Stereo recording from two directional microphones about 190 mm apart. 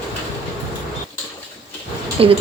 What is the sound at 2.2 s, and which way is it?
Speech, 30° right (ahead or behind).